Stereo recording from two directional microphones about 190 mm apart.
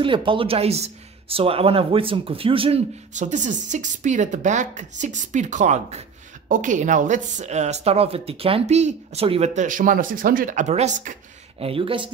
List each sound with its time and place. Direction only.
0.0 s speech: 25° right (ahead or behind)